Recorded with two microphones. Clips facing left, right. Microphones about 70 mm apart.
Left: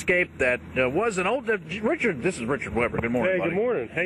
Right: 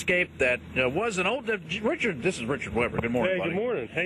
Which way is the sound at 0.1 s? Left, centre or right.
Left.